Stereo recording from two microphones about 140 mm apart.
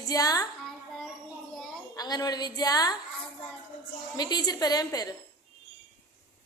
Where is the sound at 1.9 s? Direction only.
30° left (ahead or behind).